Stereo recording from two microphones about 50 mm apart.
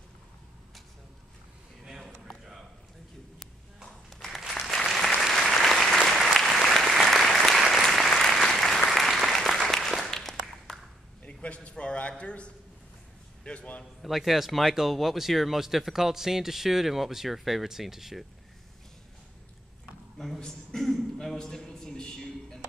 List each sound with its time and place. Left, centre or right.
2.2 s a sound: centre
3.3 s clip-clop: centre
4.3 s applause: centre
11.2 s a sound: left
14.0 s speech: centre
20.2 s a man's voice: centre